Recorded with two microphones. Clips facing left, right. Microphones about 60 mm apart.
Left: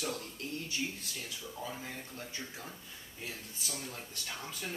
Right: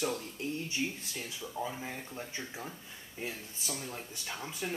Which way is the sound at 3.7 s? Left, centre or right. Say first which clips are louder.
Right 2 dB; centre.